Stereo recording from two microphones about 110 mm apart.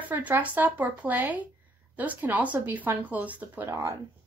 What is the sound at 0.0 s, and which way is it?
A woman's voice, 15° right (ahead or behind).